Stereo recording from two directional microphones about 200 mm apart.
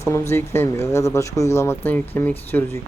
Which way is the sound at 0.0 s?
15° left (ahead or behind).